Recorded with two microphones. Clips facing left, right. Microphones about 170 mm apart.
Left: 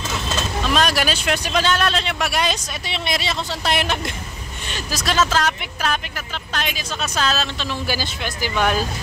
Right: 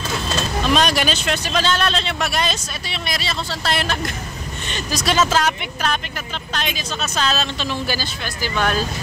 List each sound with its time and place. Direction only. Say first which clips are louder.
0.7 s speech: right 1 dB; centre (ahead or behind)
2.9 s speech: left 2 dB; 20° left (ahead or behind)
4.6 s speech: right 2 dB; 5° left (ahead or behind)